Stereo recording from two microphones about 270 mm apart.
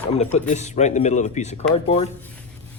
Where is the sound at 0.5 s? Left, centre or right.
Left.